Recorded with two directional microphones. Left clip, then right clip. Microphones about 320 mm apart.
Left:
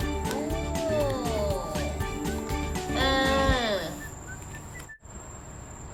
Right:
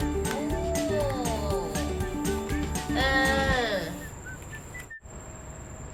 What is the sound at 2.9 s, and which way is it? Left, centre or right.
Music, left.